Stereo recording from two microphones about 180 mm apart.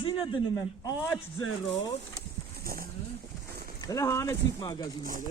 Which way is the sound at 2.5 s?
55° right (ahead or behind).